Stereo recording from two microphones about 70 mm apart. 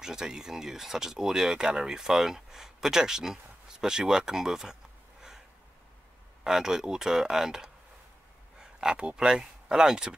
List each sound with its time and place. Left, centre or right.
0.0 s speech: centre
6.4 s speech: centre